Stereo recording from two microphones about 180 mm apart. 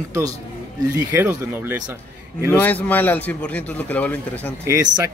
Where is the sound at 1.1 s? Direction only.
10° right (ahead or behind).